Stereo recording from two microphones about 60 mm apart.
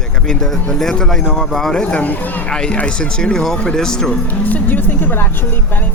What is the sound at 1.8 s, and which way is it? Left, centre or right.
Speech, left.